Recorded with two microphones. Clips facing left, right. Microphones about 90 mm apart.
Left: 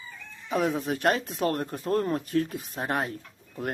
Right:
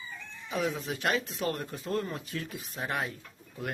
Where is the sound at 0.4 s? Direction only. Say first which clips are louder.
Left 5 dB; 45° left (ahead or behind).